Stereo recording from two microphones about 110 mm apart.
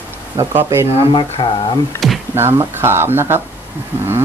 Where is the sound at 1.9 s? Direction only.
25° left (ahead or behind).